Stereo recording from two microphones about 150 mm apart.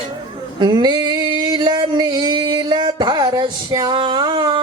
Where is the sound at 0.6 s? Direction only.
30° right (ahead or behind).